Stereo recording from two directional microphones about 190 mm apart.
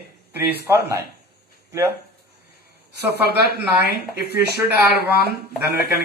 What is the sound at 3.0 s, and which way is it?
Speech, 60° right (ahead or behind).